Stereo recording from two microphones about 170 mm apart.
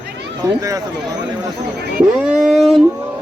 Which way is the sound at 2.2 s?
5° right (ahead or behind).